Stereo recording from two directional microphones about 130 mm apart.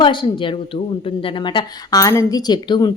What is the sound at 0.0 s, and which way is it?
Speech, 40° left (ahead or behind).